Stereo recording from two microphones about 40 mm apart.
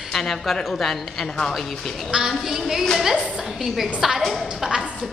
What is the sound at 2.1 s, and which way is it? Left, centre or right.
Speech, centre.